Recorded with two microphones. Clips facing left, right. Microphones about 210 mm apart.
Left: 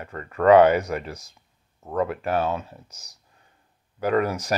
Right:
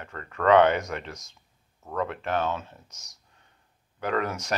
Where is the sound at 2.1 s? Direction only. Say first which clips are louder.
Left 4 dB; 5° left (ahead or behind).